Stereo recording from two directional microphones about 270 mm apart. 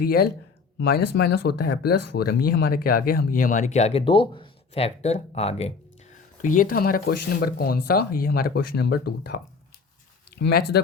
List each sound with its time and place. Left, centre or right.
0.0 s speech: left